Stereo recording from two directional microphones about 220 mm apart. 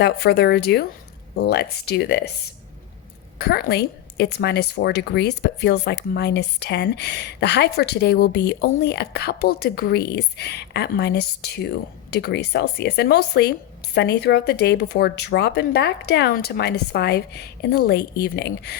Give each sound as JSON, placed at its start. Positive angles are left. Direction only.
{"t": 0.0, "sound": "speech", "side_deg": 50}
{"t": 3.3, "sound": "speech", "side_deg": 45}